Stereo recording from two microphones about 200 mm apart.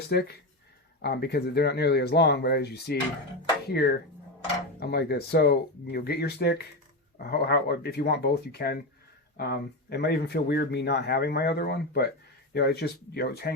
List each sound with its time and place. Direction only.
0.1 s speech: 55° left (ahead or behind)